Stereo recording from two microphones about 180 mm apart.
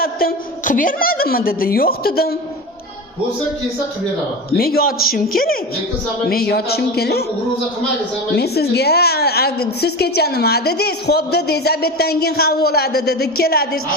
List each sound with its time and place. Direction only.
0.0 s a woman's voice: 55° left (ahead or behind)
4.5 s a woman's voice: 55° left (ahead or behind)
8.4 s a woman's voice: 65° left (ahead or behind)